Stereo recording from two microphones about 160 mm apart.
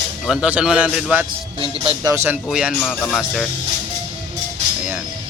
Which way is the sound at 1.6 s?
35° right (ahead or behind).